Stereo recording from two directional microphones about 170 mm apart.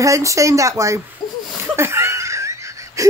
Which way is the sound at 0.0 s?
20° right (ahead or behind).